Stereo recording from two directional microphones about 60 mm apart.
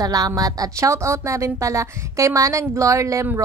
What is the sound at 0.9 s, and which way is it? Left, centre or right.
A woman's voice, right.